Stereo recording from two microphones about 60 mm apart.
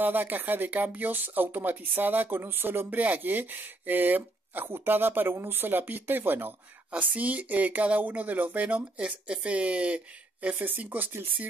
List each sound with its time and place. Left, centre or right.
0.0 s speech: right